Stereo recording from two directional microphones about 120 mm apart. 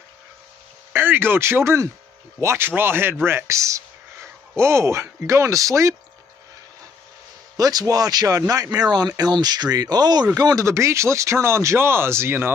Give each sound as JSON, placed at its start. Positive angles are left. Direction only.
{"t": 0.9, "sound": "speech", "side_deg": -15}
{"t": 7.5, "sound": "speech", "side_deg": -30}